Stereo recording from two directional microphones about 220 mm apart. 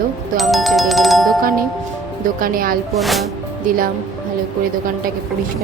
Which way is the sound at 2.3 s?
40° right (ahead or behind).